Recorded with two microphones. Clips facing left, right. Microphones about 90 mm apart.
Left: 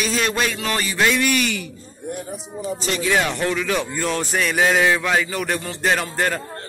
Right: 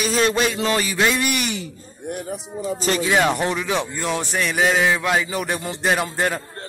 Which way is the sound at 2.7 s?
40° right (ahead or behind).